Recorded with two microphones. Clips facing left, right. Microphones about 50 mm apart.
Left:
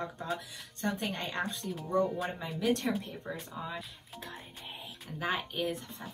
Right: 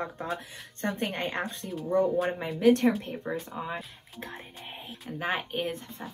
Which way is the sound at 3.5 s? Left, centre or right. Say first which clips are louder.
Right 4 dB; right.